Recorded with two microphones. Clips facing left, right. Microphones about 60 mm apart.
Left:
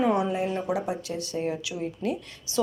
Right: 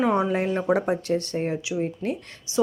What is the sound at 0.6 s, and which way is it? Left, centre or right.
A woman's voice, right.